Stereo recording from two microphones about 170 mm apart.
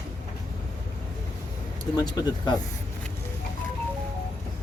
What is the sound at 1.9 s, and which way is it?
Speech, 25° left (ahead or behind).